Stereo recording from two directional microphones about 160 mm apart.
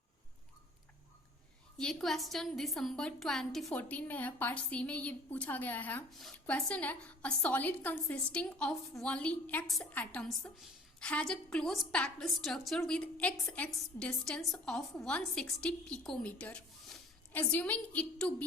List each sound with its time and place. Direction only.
1.8 s a woman's voice: centre (ahead or behind)